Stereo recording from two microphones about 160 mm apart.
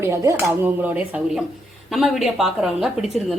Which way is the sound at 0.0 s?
15° right (ahead or behind).